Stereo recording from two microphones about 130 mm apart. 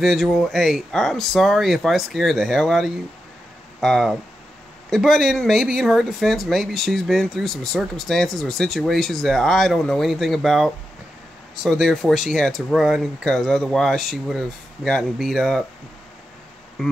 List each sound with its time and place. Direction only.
0.0 s speech: centre (ahead or behind)